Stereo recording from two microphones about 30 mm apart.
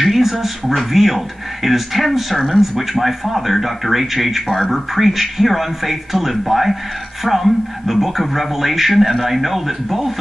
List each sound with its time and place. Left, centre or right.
0.0 s a sound: centre
0.7 s a man's voice: centre
4.5 s a man's voice: centre